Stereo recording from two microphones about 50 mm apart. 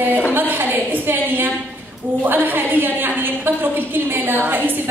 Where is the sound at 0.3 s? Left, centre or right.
Right.